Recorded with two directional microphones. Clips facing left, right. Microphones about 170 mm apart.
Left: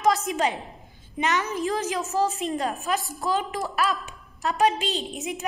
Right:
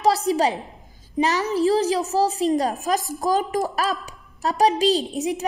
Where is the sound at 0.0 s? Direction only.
35° right (ahead or behind).